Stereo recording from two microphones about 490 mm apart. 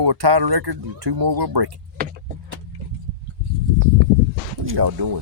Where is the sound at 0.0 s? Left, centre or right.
Right.